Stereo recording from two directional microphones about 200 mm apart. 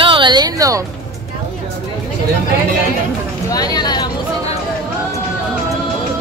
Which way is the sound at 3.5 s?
20° left (ahead or behind).